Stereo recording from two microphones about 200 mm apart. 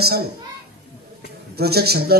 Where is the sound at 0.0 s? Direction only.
50° right (ahead or behind).